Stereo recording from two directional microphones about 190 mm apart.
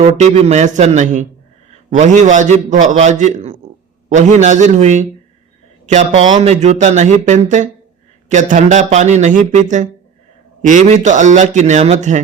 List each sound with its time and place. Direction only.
0.0 s a man's voice: 35° right (ahead or behind)